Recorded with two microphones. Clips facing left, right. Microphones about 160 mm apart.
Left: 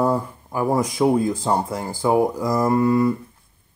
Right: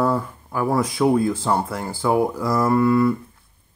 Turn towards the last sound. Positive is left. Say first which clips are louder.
# even
turn(degrees=15)  # may be behind; listen again after turning